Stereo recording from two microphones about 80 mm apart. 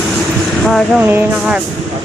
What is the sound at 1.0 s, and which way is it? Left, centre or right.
Speech, right.